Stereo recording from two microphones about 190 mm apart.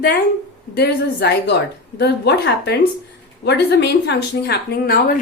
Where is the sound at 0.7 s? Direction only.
60° left (ahead or behind).